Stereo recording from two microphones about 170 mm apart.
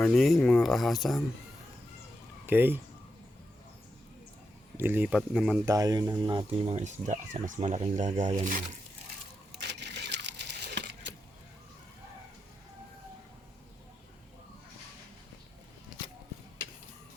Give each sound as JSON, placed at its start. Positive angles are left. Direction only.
{"t": 0.0, "sound": "speech", "side_deg": 0}
{"t": 2.5, "sound": "speech", "side_deg": -10}
{"t": 4.8, "sound": "speech", "side_deg": -10}
{"t": 5.6, "sound": "speech", "side_deg": -20}
{"t": 6.7, "sound": "speech", "side_deg": -45}
{"t": 9.5, "sound": "a sound", "side_deg": -85}